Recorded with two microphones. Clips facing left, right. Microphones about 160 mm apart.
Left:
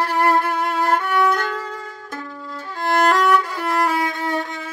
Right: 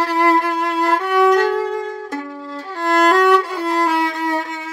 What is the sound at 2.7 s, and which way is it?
Violin, 30° right (ahead or behind).